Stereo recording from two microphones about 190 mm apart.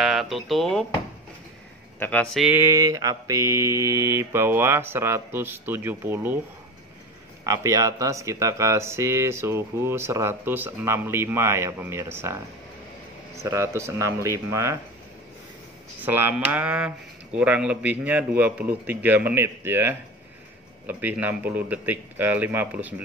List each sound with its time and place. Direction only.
0.0 s speech: centre (ahead or behind)
2.0 s speech: 10° left (ahead or behind)
2.4 s speech: 10° right (ahead or behind)
7.4 s speech: 15° right (ahead or behind)
13.4 s speech: 15° right (ahead or behind)
16.0 s speech: 10° right (ahead or behind)